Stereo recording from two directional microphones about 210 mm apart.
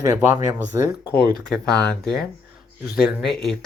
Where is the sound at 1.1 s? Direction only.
50° left (ahead or behind).